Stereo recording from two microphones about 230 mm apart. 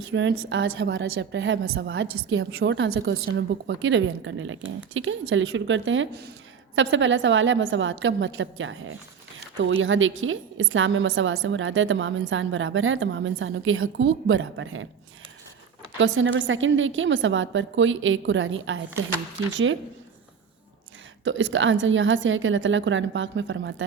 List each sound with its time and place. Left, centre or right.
0.1 s a woman's voice: right
16.0 s a woman's voice: right
21.2 s a woman's voice: right